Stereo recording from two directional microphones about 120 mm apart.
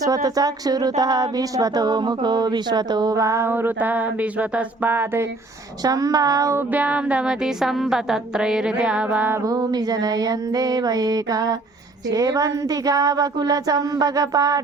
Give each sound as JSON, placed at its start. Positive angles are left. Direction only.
{"t": 0.0, "sound": "speech", "side_deg": -30}
{"t": 5.8, "sound": "speech", "side_deg": -30}
{"t": 6.7, "sound": "a woman's voice", "side_deg": -10}
{"t": 9.4, "sound": "speech", "side_deg": -30}